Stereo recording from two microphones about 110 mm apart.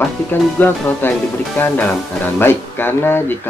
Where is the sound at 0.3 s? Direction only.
15° left (ahead or behind).